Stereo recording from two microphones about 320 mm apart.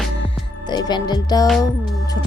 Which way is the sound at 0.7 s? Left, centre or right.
Centre.